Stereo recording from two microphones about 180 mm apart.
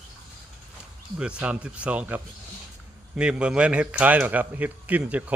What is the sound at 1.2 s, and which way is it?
Speech, 5° right (ahead or behind).